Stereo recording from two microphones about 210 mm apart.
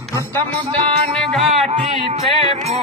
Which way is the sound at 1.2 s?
Centre (ahead or behind).